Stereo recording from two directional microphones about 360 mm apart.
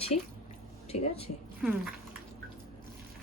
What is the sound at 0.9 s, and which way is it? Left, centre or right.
Speech, left.